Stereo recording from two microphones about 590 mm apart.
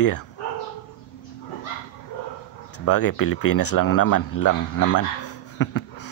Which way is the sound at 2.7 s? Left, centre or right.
Left.